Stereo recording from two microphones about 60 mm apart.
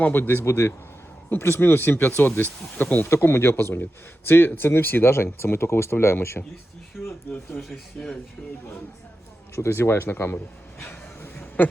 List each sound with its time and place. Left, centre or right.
0.0 s speech: left
0.4 s speech: left
1.3 s speech: left
3.1 s speech: left
7.0 s speech: centre
7.5 s speech: left
8.0 s speech: centre
8.4 s speech: centre
9.6 s speech: left
11.3 s a sound: left